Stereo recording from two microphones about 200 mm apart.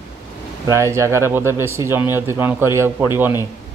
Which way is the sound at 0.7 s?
15° right (ahead or behind).